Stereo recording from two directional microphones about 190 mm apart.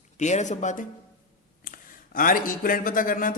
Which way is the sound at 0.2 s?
40° left (ahead or behind).